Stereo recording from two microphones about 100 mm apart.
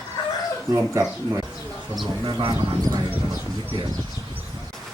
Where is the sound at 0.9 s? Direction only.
35° right (ahead or behind).